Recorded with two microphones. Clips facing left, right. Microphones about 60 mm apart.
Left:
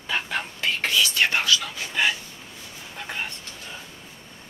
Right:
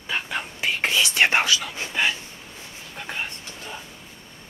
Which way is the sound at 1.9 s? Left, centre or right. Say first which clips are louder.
Even; centre.